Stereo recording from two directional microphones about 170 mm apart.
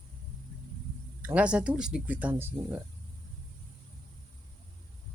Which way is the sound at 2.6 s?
25° right (ahead or behind).